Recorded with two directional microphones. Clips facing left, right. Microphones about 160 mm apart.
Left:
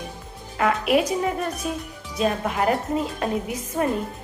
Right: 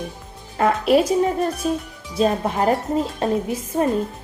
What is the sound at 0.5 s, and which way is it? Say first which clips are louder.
A woman's voice: right 4 dB; 35° right (ahead or behind).